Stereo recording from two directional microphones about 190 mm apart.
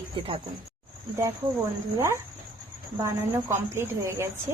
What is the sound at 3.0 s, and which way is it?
Speech, 15° right (ahead or behind).